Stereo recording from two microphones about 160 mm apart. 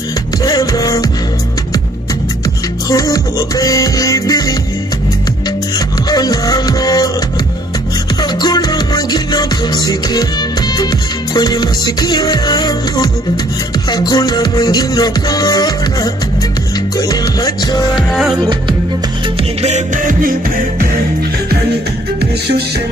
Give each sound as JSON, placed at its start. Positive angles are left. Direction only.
{"t": 0.4, "sound": "music", "side_deg": 25}
{"t": 2.9, "sound": "music", "side_deg": 25}
{"t": 6.0, "sound": "music", "side_deg": 25}
{"t": 8.2, "sound": "music", "side_deg": 25}
{"t": 17.1, "sound": "music", "side_deg": 25}
{"t": 17.9, "sound": "music", "side_deg": 0}
{"t": 18.4, "sound": "music", "side_deg": -30}
{"t": 19.6, "sound": "music", "side_deg": -50}